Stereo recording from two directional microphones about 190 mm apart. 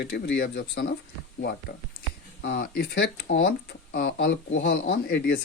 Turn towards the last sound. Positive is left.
turn(degrees=50)  # may be behind; listen again after turning